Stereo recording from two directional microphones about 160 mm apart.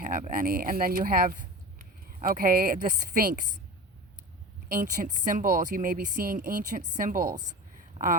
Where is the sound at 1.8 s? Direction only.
60° right (ahead or behind).